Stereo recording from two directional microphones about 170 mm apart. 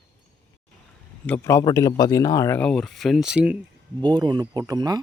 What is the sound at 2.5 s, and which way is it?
Speech, 5° left (ahead or behind).